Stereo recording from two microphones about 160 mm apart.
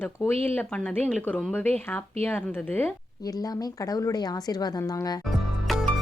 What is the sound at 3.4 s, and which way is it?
A woman's voice, 25° left (ahead or behind).